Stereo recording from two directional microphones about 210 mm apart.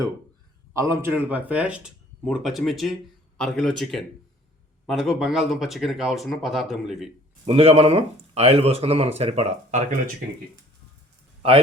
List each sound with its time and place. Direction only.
0.7 s speech: 15° right (ahead or behind)
7.4 s speech: 30° right (ahead or behind)